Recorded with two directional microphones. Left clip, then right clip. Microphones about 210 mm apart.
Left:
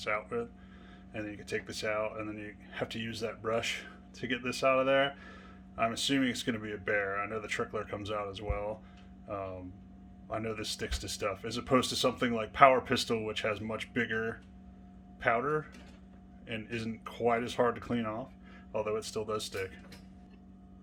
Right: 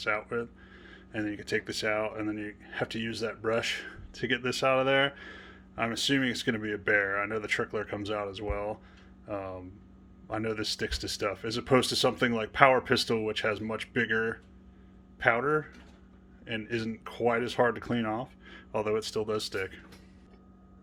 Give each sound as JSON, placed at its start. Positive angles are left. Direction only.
{"t": 0.0, "sound": "speech", "side_deg": -30}